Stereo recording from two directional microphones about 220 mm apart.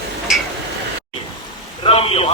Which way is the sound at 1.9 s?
25° left (ahead or behind).